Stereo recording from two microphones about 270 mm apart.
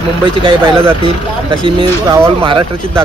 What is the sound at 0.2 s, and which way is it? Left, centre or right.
Speech, centre.